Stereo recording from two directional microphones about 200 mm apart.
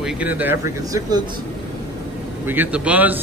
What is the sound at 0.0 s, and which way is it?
Speech, 10° right (ahead or behind).